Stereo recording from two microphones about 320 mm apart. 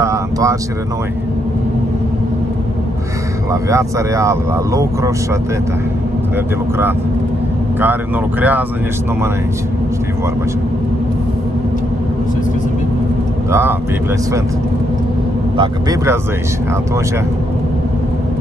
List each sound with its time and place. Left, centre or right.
0.0 s speech: centre
3.6 s speech: centre
7.8 s speech: centre
13.5 s speech: centre
15.5 s speech: centre